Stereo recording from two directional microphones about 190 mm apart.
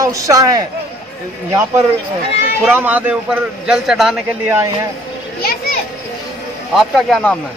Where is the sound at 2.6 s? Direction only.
10° right (ahead or behind).